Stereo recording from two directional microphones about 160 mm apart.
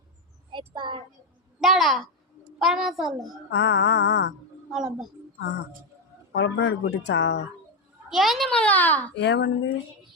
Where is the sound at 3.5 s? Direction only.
90° left.